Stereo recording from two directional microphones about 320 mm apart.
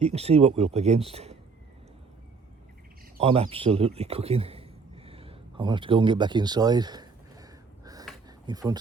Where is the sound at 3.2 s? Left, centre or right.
Centre.